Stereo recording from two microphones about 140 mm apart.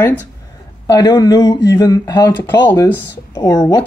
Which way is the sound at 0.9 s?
25° left (ahead or behind).